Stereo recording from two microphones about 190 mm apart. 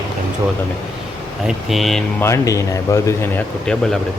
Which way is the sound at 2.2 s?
15° left (ahead or behind).